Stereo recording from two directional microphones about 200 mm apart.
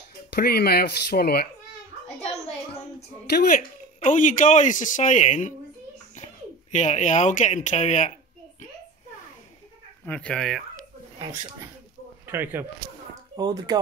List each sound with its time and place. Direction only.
0.3 s speech: 50° left (ahead or behind)
3.3 s speech: 50° left (ahead or behind)
4.0 s a woman's voice: 40° left (ahead or behind)
10.0 s speech: 5° left (ahead or behind)
12.3 s speech: 10° right (ahead or behind)